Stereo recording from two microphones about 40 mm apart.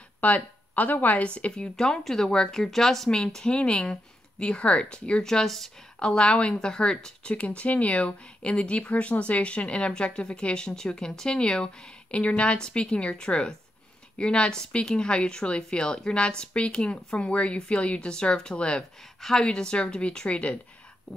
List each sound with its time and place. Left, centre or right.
0.2 s speech: left
1.8 s speech: centre
5.2 s speech: centre
5.9 s speech: left
7.2 s speech: left
12.5 s speech: centre